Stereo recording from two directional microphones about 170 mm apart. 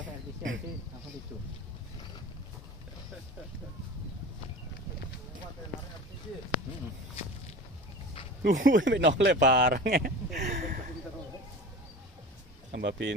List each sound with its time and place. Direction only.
8.4 s speech: 80° right
9.9 s a sound: 70° right (ahead or behind)
12.7 s speech: 90° right